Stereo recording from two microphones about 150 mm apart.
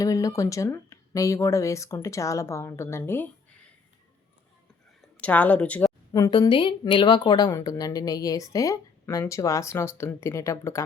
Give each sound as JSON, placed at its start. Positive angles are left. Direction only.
{"t": 0.0, "sound": "a woman's voice", "side_deg": 25}
{"t": 5.2, "sound": "speech", "side_deg": 10}
{"t": 6.1, "sound": "a woman's voice", "side_deg": 25}